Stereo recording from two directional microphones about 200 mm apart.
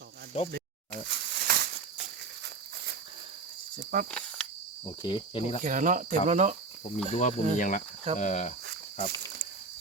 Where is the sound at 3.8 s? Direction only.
45° right (ahead or behind).